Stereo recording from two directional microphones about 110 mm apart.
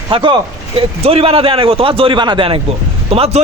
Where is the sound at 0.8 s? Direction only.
60° right (ahead or behind).